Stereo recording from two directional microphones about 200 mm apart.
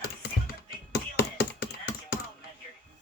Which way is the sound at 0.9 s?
50° left (ahead or behind).